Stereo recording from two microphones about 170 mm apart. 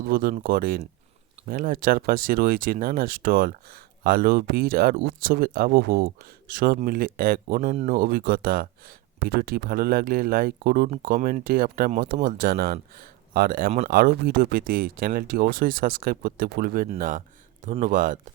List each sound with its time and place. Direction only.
0.0 s speech: 55° right (ahead or behind)
7.9 s speech: 60° right (ahead or behind)